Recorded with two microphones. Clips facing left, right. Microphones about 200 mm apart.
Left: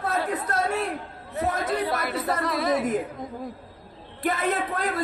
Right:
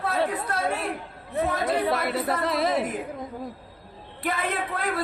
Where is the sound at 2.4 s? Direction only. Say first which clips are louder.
Left 1 dB; 25° right (ahead or behind).